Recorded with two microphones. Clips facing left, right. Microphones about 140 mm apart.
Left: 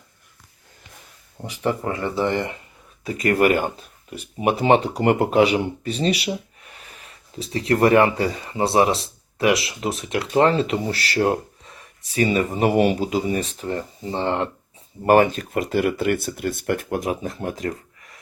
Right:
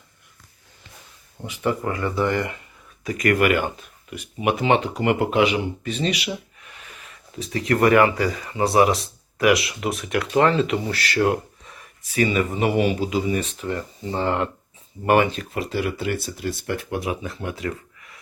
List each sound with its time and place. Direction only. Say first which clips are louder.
1.5 s speech: even; 35° left (ahead or behind)
15.0 s speech: left 3 dB; 40° left (ahead or behind)